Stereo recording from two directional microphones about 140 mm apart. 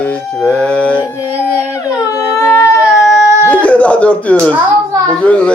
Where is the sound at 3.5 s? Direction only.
10° left (ahead or behind).